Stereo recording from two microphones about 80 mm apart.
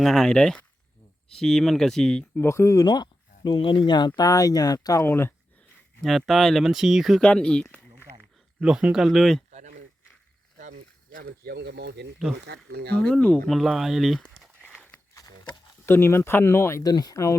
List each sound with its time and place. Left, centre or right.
0.0 s speech: centre
2.4 s speech: left
2.7 s speech: left
4.9 s speech: left
6.0 s speech: centre
7.2 s speech: centre
8.6 s speech: centre
9.0 s speech: centre
13.0 s speech: centre
13.5 s speech: centre
14.6 s walk: centre
15.9 s speech: left
16.8 s speech: left